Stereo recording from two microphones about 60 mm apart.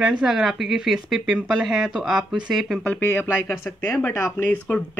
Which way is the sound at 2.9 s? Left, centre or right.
Left.